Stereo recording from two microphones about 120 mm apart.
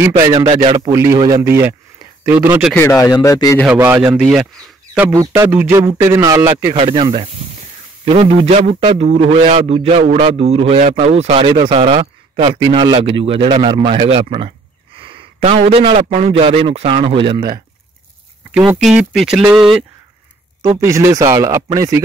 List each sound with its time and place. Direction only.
0.0 s a man's voice: 25° right (ahead or behind)
2.8 s speech: 25° left (ahead or behind)
3.6 s a man's voice: 15° right (ahead or behind)
5.1 s speech: 30° right (ahead or behind)
6.8 s a man's voice: 45° right (ahead or behind)
11.4 s speech: 45° right (ahead or behind)
15.0 s a sound: 45° right (ahead or behind)
16.3 s speech: 50° right (ahead or behind)
18.5 s speech: 5° right (ahead or behind)
20.8 s speech: 25° right (ahead or behind)